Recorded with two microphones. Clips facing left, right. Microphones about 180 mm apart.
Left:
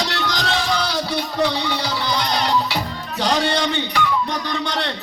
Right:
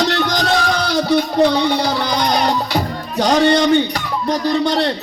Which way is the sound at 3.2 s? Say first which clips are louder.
Right 7 dB; 45° right (ahead or behind).